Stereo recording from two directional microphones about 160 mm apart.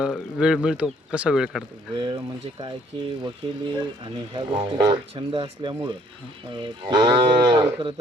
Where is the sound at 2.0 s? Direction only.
30° right (ahead or behind).